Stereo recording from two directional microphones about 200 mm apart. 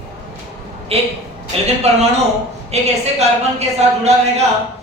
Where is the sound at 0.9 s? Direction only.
30° right (ahead or behind).